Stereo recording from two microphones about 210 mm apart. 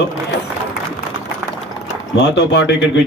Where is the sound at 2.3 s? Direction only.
55° left (ahead or behind).